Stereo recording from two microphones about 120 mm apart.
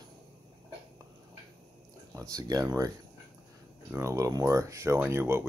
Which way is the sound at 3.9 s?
25° right (ahead or behind).